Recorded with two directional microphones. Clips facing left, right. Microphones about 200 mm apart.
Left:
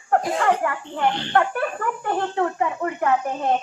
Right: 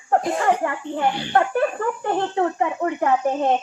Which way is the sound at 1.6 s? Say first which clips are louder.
Right 4 dB; 25° right (ahead or behind).